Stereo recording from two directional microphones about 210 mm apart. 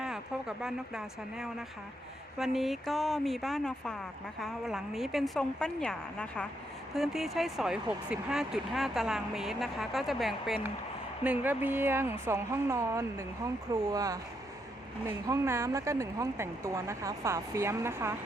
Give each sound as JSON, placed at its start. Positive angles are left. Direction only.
{"t": 0.0, "sound": "speech", "side_deg": -5}